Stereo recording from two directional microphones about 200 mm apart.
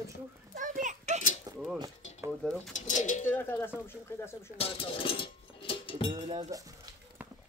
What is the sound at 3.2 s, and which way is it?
Speech, 10° left (ahead or behind).